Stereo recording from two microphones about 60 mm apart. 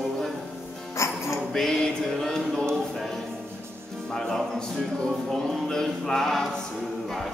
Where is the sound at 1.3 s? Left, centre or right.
Centre.